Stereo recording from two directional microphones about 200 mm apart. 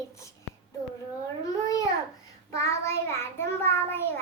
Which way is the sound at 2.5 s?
15° left (ahead or behind).